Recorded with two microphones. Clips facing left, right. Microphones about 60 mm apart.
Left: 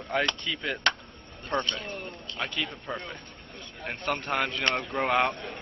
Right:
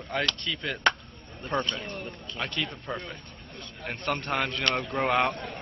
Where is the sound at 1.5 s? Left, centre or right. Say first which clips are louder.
Even; centre.